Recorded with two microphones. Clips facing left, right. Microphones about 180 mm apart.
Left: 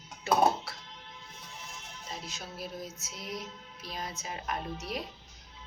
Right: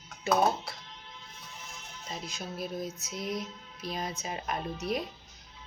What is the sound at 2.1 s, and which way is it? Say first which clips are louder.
Music: right 4 dB; 15° right (ahead or behind).